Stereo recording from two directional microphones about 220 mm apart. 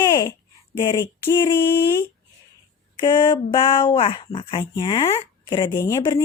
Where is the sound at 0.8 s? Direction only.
15° left (ahead or behind).